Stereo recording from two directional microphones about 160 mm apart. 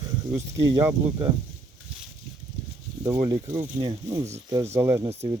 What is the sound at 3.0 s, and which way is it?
Speech, 20° right (ahead or behind).